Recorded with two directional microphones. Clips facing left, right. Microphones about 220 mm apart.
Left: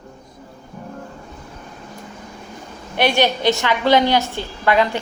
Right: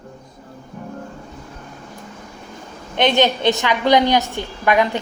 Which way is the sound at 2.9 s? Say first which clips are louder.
Right 1 dB; 20° right (ahead or behind).